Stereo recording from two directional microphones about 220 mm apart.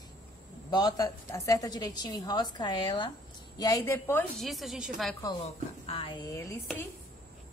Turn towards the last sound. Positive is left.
turn(degrees=15)  # may be behind; listen again after turning